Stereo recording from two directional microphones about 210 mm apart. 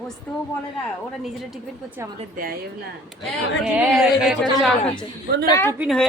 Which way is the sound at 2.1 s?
40° right (ahead or behind).